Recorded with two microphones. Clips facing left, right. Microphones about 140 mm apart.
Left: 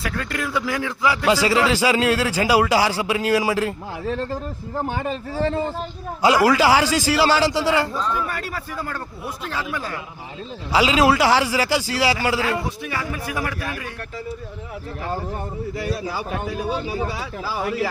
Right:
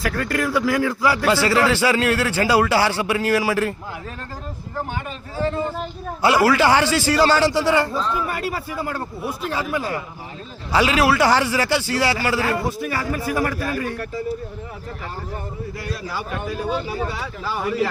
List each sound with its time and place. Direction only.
0.0 s a man's voice: centre (ahead or behind)
1.2 s a man's voice: 15° left (ahead or behind)
4.1 s speech: 30° left (ahead or behind)
6.2 s a man's voice: 15° left (ahead or behind)
7.9 s speech: 10° right (ahead or behind)
10.7 s a man's voice: 15° left (ahead or behind)
11.2 s a man's voice: 10° left (ahead or behind)
12.8 s a man's voice: 5° right (ahead or behind)
16.6 s a man's voice: 15° left (ahead or behind)